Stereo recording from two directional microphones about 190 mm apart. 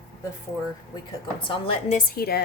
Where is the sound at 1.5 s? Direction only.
35° left (ahead or behind).